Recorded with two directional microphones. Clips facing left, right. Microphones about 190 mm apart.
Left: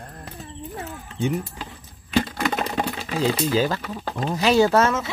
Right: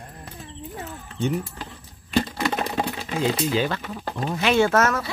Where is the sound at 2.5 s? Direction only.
15° right (ahead or behind).